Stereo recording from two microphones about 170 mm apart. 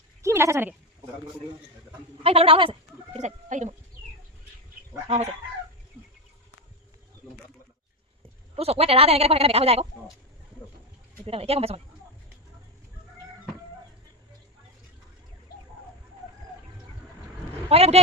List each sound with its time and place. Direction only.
0.2 s speech: 15° right (ahead or behind)
2.2 s speech: 35° right (ahead or behind)
3.2 s speech: 45° right (ahead or behind)
5.0 s speech: 40° right (ahead or behind)
8.5 s speech: 35° right (ahead or behind)
11.3 s speech: 35° right (ahead or behind)
17.7 s speech: 35° right (ahead or behind)